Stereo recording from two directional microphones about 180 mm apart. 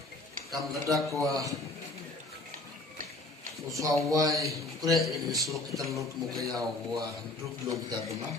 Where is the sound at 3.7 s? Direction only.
20° right (ahead or behind).